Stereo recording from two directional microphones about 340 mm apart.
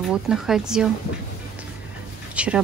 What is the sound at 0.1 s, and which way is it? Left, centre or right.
Speech, centre.